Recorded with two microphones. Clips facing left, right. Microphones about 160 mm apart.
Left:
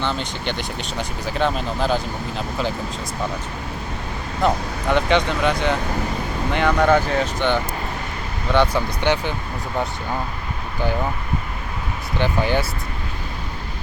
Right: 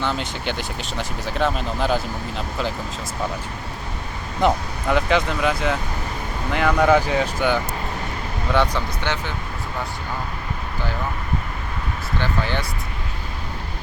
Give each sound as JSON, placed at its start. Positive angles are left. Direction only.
{"t": 0.0, "sound": "speech", "side_deg": -5}
{"t": 4.9, "sound": "speech", "side_deg": 0}
{"t": 8.5, "sound": "speech", "side_deg": 5}
{"t": 9.0, "sound": "speech", "side_deg": 15}
{"t": 12.2, "sound": "speech", "side_deg": 15}